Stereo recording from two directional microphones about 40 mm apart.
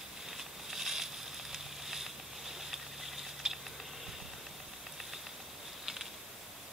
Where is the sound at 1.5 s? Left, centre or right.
Centre.